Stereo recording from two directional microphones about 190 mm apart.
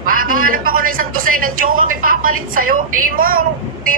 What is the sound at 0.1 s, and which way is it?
A man's voice, 50° right (ahead or behind).